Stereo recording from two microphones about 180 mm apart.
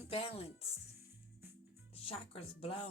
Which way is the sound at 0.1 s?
30° left (ahead or behind).